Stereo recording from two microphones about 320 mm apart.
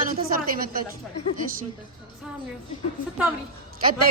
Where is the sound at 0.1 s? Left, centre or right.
Right.